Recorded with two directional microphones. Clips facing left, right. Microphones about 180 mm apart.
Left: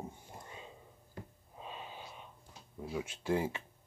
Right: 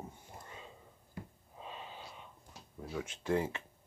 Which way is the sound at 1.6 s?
20° left (ahead or behind).